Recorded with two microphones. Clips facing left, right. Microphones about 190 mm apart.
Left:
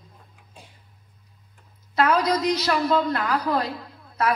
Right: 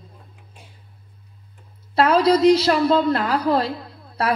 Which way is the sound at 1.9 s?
30° right (ahead or behind).